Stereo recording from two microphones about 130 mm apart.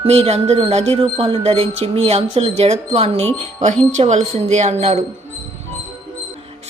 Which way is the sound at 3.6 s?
65° right (ahead or behind).